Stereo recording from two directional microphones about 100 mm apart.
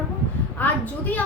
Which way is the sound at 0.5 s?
15° left (ahead or behind).